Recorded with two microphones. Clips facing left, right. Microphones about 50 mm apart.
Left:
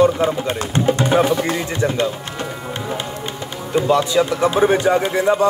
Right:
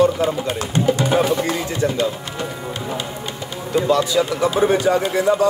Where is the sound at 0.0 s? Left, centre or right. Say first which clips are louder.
Left 1 dB; left.